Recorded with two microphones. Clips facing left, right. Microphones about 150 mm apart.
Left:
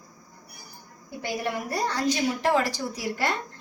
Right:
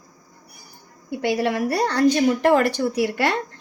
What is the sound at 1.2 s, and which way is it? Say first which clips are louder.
Speech: right 8 dB; 80° right.